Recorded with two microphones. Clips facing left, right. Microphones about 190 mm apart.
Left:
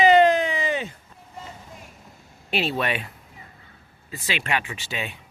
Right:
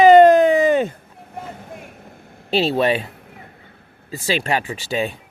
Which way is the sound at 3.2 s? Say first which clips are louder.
Right 6 dB; 65° right (ahead or behind).